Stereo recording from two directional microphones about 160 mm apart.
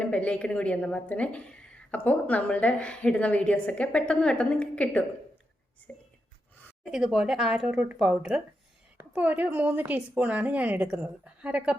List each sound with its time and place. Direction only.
0.0 s a woman's voice: 5° left (ahead or behind)
6.9 s a woman's voice: 5° right (ahead or behind)